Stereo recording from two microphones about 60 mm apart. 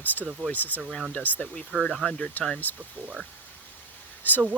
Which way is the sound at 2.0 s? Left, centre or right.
Left.